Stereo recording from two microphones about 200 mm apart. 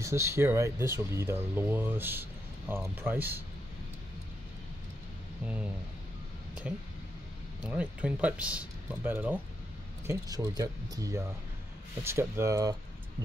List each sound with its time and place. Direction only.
0.0 s speech: 15° right (ahead or behind)
6.7 s speech: 5° right (ahead or behind)